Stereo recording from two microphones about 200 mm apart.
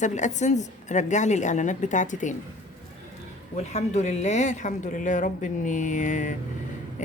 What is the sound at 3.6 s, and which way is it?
Speech, 35° left (ahead or behind).